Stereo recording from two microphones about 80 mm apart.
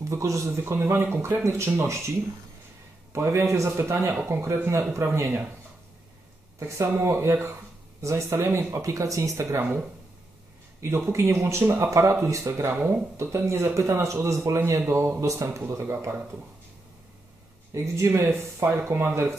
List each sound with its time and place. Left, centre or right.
0.0 s speech: right
6.6 s speech: right
10.8 s speech: right
12.7 s speech: right
13.2 s speech: right
17.9 s speech: right